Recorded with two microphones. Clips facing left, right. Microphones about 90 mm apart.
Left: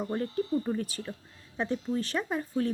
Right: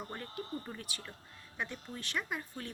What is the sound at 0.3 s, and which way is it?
Speech, 25° left (ahead or behind).